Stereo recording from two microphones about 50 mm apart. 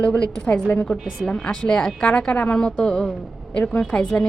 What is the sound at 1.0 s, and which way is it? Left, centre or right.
Speech, centre.